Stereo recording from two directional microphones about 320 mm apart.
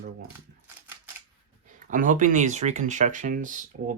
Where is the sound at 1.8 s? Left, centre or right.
Right.